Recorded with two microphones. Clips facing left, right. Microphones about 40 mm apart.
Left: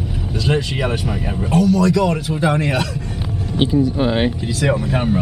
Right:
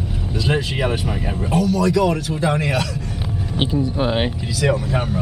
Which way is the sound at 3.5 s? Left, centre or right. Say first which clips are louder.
Left 5 dB; centre.